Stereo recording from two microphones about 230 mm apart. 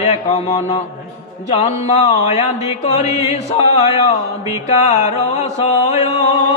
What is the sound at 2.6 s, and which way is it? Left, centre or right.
Music, centre.